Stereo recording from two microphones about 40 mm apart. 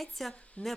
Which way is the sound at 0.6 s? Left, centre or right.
Left.